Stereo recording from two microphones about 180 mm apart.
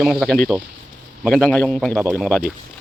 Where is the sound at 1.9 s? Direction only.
15° right (ahead or behind).